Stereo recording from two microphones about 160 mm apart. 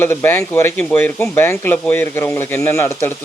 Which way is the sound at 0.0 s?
15° left (ahead or behind).